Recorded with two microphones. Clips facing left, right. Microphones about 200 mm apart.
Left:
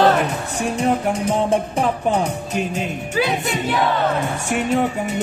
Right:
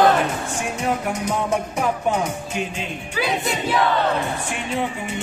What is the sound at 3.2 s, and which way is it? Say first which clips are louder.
Chant: left 1 dB; centre (ahead or behind).